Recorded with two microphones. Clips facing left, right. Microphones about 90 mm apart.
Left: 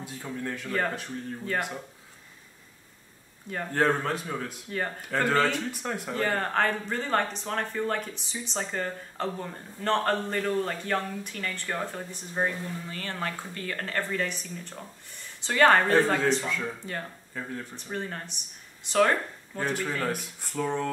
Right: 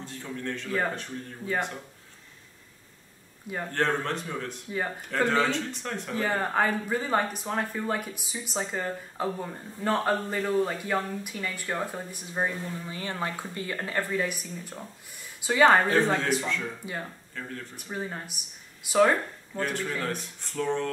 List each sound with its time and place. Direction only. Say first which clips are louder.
0.0 s speech: left 1 dB; 10° left (ahead or behind)
0.7 s speech: even; 5° right (ahead or behind)
3.7 s speech: left 2 dB; 5° left (ahead or behind)
4.6 s speech: right 1 dB; 10° right (ahead or behind)
5.7 s speech: left 2 dB; 10° left (ahead or behind)
6.1 s speech: right 1 dB; 5° right (ahead or behind)
16.4 s speech: even; 5° left (ahead or behind)
17.7 s speech: right 2 dB; 10° right (ahead or behind)
19.9 s speech: left 2 dB; 5° left (ahead or behind)